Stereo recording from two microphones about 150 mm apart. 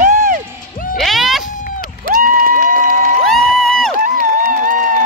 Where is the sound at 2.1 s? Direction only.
65° right (ahead or behind).